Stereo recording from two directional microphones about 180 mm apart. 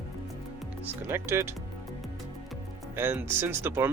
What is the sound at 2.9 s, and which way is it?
Speech, 10° right (ahead or behind).